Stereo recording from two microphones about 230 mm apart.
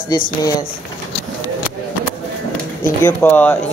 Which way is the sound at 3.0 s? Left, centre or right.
Centre.